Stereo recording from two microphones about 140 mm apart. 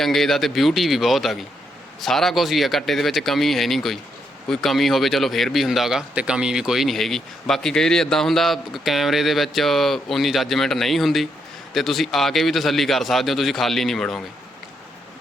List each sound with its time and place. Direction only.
0.0 s speech: centre (ahead or behind)